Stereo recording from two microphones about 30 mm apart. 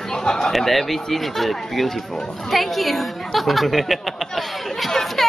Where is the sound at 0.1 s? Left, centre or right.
Left.